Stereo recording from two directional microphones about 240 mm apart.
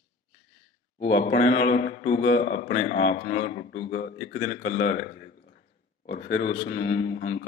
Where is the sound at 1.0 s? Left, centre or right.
Left.